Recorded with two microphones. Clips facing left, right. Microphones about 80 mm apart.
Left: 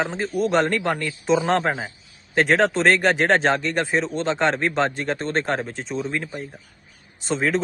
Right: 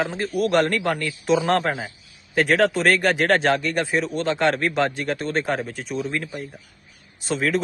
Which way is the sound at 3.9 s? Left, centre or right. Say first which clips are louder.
Even; left.